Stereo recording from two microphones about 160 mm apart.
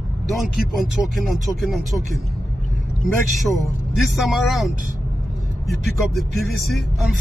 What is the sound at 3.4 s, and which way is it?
Speech, centre (ahead or behind).